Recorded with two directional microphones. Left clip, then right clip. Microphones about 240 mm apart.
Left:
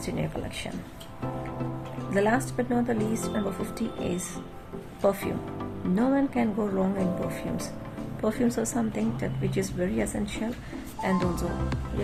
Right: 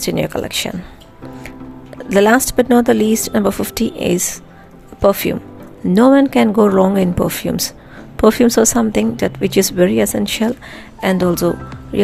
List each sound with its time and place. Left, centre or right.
0.0 s speech: right
2.0 s speech: right
5.9 s speech: right